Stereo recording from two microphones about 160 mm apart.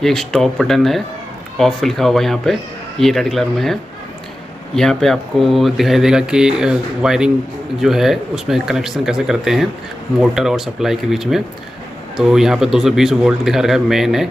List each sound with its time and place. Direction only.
0.0 s speech: centre (ahead or behind)
4.7 s speech: 5° left (ahead or behind)